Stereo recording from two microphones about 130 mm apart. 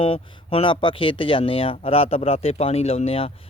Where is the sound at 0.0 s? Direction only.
45° left (ahead or behind).